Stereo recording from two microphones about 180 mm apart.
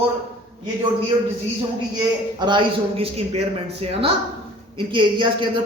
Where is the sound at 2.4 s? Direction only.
25° right (ahead or behind).